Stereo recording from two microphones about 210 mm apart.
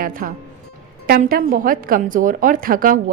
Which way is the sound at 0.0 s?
40° right (ahead or behind).